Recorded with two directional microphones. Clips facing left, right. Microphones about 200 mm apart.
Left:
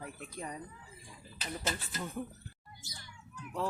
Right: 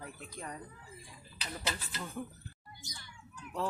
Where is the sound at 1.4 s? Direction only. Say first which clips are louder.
Left 2 dB; 45° left (ahead or behind).